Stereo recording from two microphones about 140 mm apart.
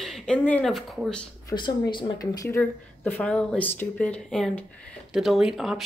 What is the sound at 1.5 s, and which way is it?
Speech, 35° left (ahead or behind).